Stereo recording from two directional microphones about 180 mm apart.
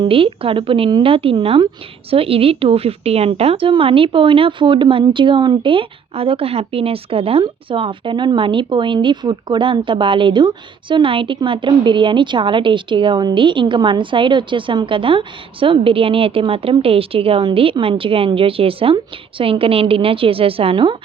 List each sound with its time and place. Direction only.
0.0 s a woman's voice: 30° right (ahead or behind)